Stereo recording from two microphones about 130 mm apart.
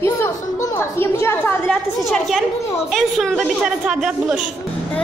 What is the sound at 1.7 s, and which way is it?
Speech, centre (ahead or behind).